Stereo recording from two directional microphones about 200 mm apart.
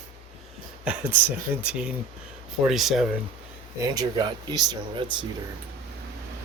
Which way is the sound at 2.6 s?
Centre (ahead or behind).